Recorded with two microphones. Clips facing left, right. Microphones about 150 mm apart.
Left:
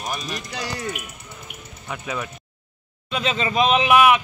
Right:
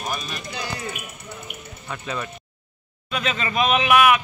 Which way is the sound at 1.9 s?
10° left (ahead or behind).